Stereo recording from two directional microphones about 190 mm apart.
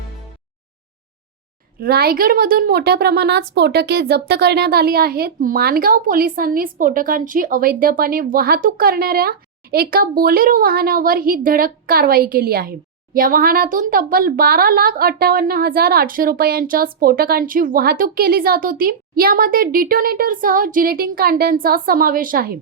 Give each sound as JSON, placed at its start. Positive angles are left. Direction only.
{"t": 1.8, "sound": "speech", "side_deg": -55}